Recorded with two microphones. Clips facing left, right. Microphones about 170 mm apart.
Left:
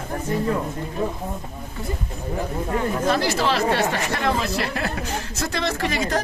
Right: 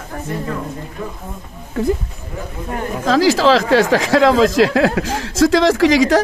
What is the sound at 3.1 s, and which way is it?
Speech, 90° right.